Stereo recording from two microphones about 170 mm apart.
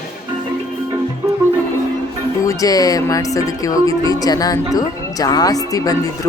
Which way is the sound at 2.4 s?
20° left (ahead or behind).